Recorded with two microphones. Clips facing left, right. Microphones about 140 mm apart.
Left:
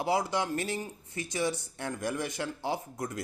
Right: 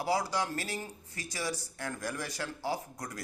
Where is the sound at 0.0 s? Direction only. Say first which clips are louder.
Left 2 dB; 25° left (ahead or behind).